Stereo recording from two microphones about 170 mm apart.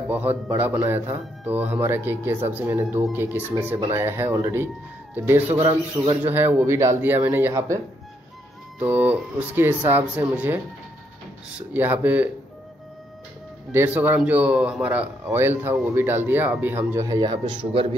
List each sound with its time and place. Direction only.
0.1 s speech: 10° right (ahead or behind)
5.6 s speech: 25° right (ahead or behind)
6.2 s speech: 10° right (ahead or behind)
11.7 s speech: 10° right (ahead or behind)
13.7 s speech: 10° right (ahead or behind); by 17.8 s 30° right (ahead or behind)